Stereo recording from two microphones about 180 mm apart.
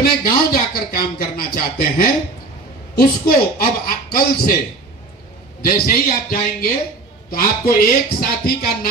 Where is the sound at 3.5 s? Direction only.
55° left (ahead or behind).